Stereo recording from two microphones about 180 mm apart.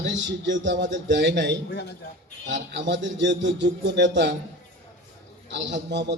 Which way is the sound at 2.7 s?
80° right.